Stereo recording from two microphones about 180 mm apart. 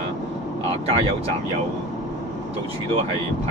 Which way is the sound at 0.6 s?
30° right (ahead or behind).